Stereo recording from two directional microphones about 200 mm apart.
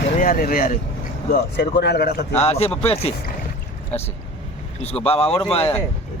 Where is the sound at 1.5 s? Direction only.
55° left (ahead or behind).